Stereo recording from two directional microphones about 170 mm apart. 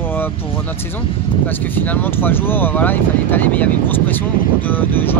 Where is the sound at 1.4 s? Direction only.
10° left (ahead or behind).